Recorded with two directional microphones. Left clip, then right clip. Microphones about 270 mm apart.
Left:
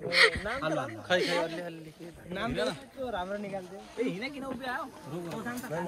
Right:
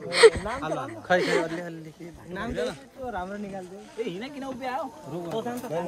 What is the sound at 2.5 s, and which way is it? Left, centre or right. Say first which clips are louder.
Speech: right 4 dB; centre.